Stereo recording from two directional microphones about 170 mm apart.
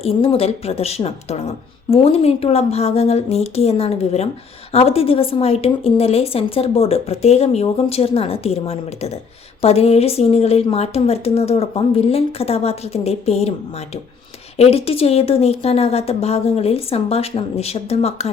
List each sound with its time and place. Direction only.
0.2 s a woman's voice: 35° left (ahead or behind)
14.6 s a woman's voice: 35° left (ahead or behind)